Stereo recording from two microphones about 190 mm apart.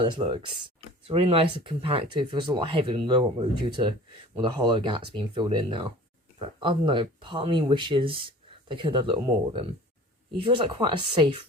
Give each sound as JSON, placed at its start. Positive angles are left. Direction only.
{"t": 0.0, "sound": "speech", "side_deg": -25}